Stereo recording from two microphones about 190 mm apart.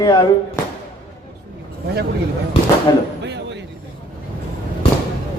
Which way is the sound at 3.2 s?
65° right (ahead or behind).